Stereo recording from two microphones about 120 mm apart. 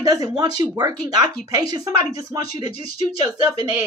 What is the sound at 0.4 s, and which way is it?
A woman's voice, 30° right (ahead or behind).